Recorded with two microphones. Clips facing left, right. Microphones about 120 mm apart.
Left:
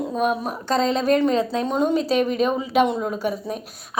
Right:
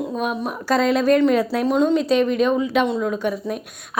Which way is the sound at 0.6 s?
30° left (ahead or behind).